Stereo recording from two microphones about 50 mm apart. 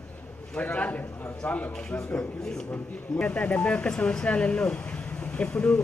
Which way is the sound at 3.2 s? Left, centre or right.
Left.